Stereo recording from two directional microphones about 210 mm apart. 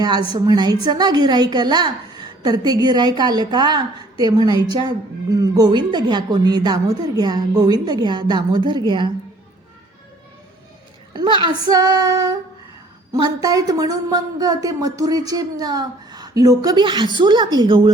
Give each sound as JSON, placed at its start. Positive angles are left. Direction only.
{"t": 0.0, "sound": "a woman's voice", "side_deg": -20}
{"t": 11.1, "sound": "a woman's voice", "side_deg": -20}